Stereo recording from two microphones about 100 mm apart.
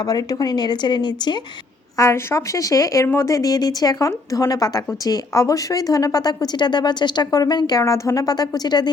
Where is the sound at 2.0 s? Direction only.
30° left (ahead or behind).